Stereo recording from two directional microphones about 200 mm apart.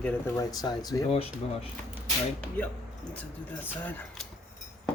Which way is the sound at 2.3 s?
5° left (ahead or behind).